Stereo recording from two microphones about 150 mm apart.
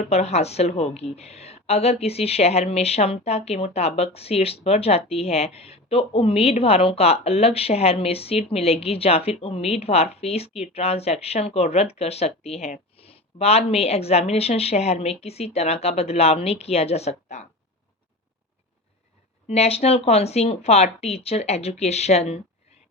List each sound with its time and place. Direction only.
0.1 s a woman's voice: 45° left (ahead or behind)
19.5 s a woman's voice: 45° left (ahead or behind)